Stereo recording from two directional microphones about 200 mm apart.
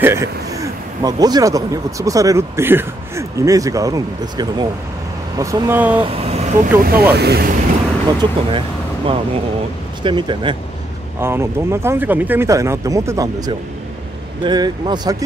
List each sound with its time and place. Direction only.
0.0 s speech: 15° right (ahead or behind)
6.0 s speech: 30° right (ahead or behind)
6.8 s speech: 50° right (ahead or behind)
8.2 s speech: 25° right (ahead or behind)
11.1 s speech: 10° right (ahead or behind)